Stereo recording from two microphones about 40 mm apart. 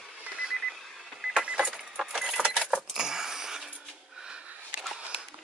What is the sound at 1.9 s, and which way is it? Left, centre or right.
Keys jangling, centre.